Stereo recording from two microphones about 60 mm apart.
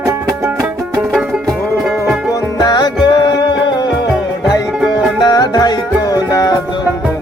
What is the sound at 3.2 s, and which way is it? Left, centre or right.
Music, left.